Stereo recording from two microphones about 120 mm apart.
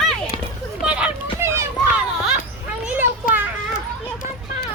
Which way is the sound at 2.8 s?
15° right (ahead or behind).